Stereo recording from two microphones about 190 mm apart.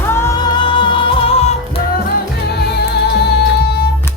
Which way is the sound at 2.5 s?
60° left (ahead or behind).